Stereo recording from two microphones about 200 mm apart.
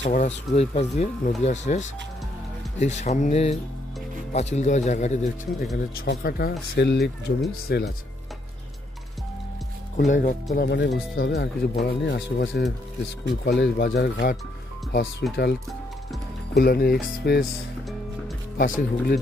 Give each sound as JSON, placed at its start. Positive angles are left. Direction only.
{"t": 0.0, "sound": "speech", "side_deg": 35}
{"t": 5.9, "sound": "speech", "side_deg": 50}
{"t": 9.9, "sound": "speech", "side_deg": 40}
{"t": 10.6, "sound": "speech", "side_deg": 60}
{"t": 16.5, "sound": "speech", "side_deg": 50}
{"t": 18.6, "sound": "speech", "side_deg": 45}